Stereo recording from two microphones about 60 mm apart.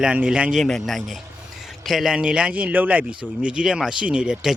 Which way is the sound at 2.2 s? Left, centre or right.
Centre.